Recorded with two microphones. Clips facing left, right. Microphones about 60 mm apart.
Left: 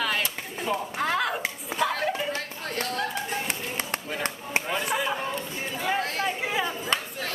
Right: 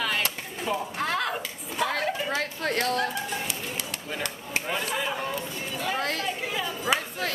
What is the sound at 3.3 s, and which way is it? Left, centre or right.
Bird, left.